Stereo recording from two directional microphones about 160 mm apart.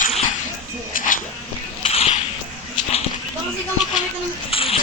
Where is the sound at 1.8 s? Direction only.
40° left (ahead or behind).